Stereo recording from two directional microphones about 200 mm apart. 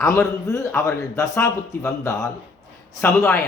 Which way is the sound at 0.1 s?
15° left (ahead or behind).